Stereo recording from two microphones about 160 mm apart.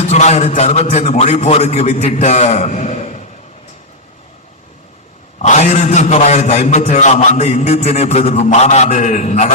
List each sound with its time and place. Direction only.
0.0 s a man's voice: 45° left (ahead or behind)
5.4 s a man's voice: 45° left (ahead or behind)